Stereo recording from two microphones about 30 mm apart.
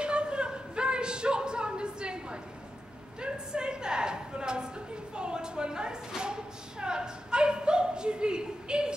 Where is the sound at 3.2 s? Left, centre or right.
Right.